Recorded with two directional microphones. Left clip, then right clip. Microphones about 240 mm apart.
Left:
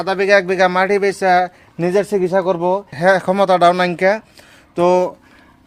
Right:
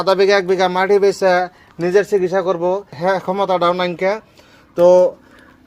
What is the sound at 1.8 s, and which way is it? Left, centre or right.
Speech, left.